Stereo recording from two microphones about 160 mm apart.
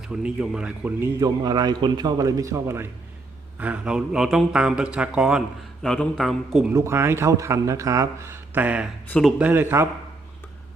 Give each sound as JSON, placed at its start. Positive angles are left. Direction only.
{"t": 0.0, "sound": "a man's voice", "side_deg": -5}
{"t": 6.7, "sound": "speech", "side_deg": -15}
{"t": 9.0, "sound": "a man's voice", "side_deg": 5}
{"t": 9.4, "sound": "speech", "side_deg": -10}